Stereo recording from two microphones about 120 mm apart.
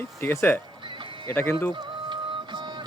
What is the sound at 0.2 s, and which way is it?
Speech, 20° left (ahead or behind).